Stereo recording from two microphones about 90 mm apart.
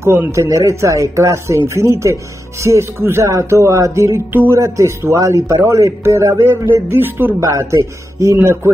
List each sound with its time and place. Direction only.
0.0 s speech: 30° right (ahead or behind)
4.3 s speech: 20° right (ahead or behind)
4.6 s speech: 35° right (ahead or behind)